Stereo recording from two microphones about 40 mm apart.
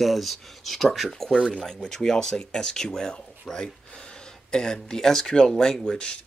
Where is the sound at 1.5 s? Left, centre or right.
Centre.